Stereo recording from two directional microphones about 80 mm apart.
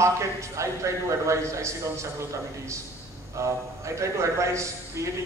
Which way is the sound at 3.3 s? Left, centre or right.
Right.